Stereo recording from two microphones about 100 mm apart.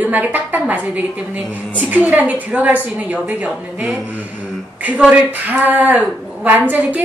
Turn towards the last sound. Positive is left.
turn(degrees=-15)  # may be behind; listen again after turning